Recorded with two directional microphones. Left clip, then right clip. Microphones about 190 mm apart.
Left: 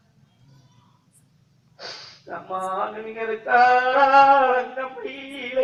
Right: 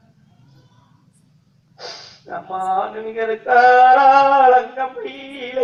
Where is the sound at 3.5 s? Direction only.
25° right (ahead or behind).